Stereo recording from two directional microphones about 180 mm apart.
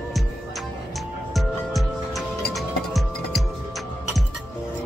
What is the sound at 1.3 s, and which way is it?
Music, centre (ahead or behind).